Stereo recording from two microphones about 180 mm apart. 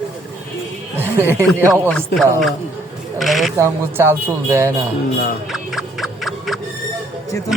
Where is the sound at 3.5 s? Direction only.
15° right (ahead or behind).